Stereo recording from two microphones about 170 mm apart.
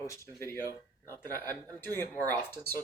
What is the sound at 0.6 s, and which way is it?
Speech, 20° right (ahead or behind).